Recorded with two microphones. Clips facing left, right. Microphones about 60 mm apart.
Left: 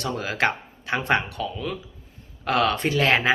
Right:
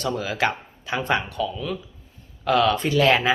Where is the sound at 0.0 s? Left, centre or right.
Left.